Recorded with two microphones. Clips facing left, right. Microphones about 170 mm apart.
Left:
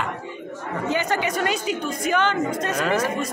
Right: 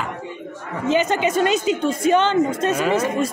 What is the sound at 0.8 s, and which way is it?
A woman's voice, 20° right (ahead or behind).